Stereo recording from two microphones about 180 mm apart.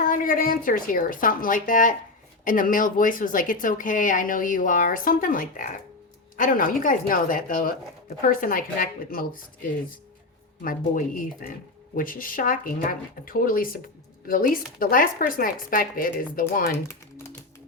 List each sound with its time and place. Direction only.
0.0 s a woman's voice: 50° left (ahead or behind)
10.6 s a woman's voice: 50° left (ahead or behind)